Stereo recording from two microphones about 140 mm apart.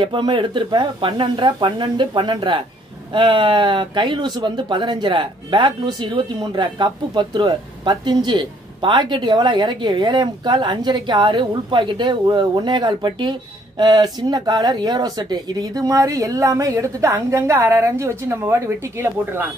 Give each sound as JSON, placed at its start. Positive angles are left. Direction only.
{"t": 0.0, "sound": "speech", "side_deg": -35}